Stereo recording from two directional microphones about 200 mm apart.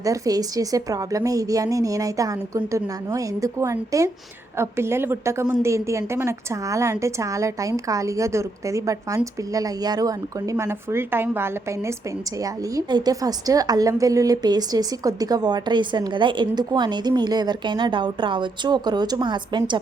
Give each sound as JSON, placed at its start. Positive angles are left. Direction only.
{"t": 0.0, "sound": "a woman's voice", "side_deg": -15}